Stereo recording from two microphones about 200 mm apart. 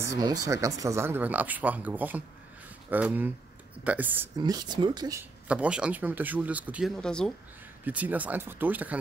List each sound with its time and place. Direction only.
0.0 s speech: 15° right (ahead or behind)
4.4 s speech: 20° right (ahead or behind)
5.5 s speech: 5° right (ahead or behind)
7.0 s speech: 5° left (ahead or behind)
7.8 s speech: 10° right (ahead or behind)